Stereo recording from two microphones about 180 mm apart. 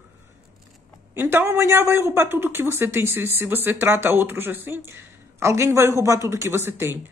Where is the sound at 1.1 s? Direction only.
15° right (ahead or behind).